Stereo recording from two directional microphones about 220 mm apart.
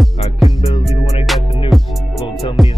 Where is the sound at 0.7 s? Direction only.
30° left (ahead or behind).